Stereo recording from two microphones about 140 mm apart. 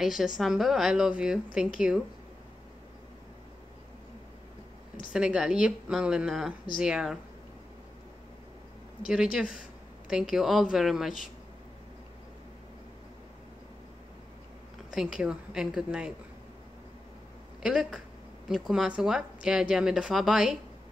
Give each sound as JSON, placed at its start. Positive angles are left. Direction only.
{"t": 0.0, "sound": "a woman's voice", "side_deg": -5}
{"t": 5.1, "sound": "a woman's voice", "side_deg": -5}
{"t": 9.0, "sound": "a woman's voice", "side_deg": -5}
{"t": 14.9, "sound": "a woman's voice", "side_deg": -5}
{"t": 17.6, "sound": "a woman's voice", "side_deg": -5}